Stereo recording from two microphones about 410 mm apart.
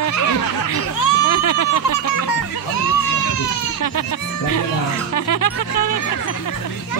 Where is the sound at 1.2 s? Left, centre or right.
Left.